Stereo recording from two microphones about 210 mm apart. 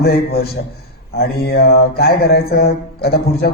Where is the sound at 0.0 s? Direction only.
50° left (ahead or behind).